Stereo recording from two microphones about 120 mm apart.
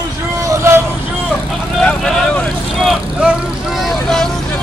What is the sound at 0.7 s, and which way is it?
Vehicle, 20° right (ahead or behind).